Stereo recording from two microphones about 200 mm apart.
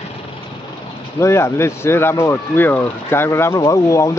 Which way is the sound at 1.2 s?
15° left (ahead or behind).